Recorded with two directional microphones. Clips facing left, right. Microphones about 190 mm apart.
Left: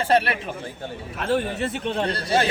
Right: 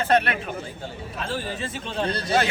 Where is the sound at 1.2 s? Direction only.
60° left (ahead or behind).